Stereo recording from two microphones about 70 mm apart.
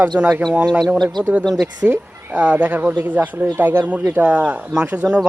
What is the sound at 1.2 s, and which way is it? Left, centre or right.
Speech, right.